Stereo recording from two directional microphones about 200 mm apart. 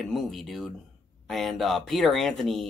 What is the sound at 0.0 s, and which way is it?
Speech, centre (ahead or behind).